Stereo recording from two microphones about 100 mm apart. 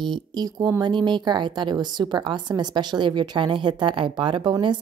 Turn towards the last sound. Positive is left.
turn(degrees=-50)  # may be behind; listen again after turning